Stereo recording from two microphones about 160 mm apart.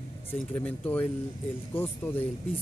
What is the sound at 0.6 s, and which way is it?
Speech, 10° left (ahead or behind).